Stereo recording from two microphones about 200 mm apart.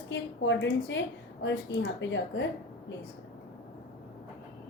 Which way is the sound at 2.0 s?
65° left (ahead or behind).